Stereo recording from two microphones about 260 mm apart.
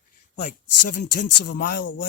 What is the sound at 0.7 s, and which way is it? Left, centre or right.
Speech, left.